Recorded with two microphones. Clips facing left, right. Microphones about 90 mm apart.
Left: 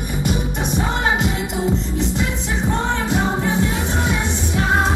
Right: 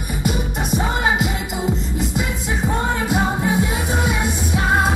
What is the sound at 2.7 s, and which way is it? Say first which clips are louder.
Music: even; 5° right (ahead or behind).